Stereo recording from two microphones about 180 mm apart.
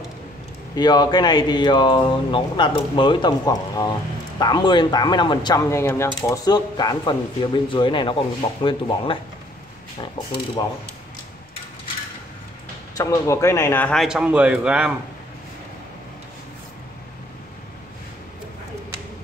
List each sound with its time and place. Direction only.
0.7 s speech: 20° left (ahead or behind)
12.9 s speech: 15° left (ahead or behind)
14.0 s a man's voice: 5° right (ahead or behind)